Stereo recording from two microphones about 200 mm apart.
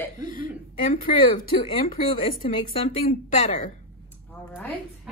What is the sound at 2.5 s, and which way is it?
Speech, 25° left (ahead or behind).